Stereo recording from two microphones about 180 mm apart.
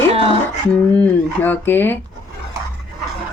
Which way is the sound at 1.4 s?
10° left (ahead or behind).